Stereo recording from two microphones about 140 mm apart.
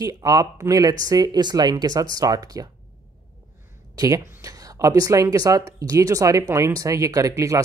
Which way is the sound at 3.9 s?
25° right (ahead or behind).